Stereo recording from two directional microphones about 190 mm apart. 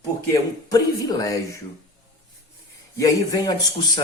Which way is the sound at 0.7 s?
20° left (ahead or behind).